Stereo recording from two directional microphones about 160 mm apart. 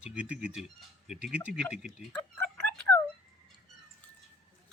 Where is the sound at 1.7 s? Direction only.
Centre (ahead or behind).